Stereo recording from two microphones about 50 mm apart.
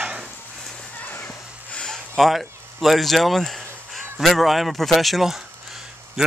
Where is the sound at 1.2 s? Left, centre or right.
Left.